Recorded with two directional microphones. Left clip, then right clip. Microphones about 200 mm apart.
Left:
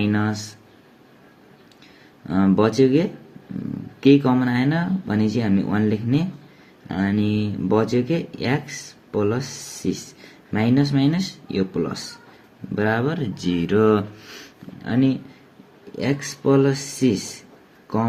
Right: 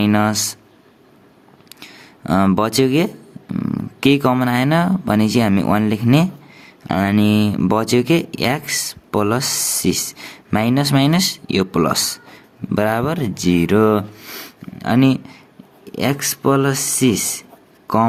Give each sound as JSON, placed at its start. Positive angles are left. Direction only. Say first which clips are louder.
{"t": 0.0, "sound": "speech", "louder": "right 7 dB", "side_deg": -45}
{"t": 2.2, "sound": "speech", "louder": "right 3 dB", "side_deg": -45}